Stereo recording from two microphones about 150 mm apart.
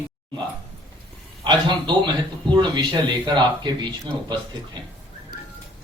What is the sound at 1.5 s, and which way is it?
Speech, 30° right (ahead or behind).